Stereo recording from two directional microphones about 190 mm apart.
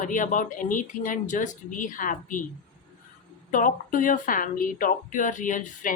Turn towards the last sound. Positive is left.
turn(degrees=45)  # may be behind; listen again after turning